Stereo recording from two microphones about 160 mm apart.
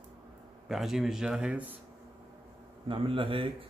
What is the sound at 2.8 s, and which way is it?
Speech, 35° right (ahead or behind).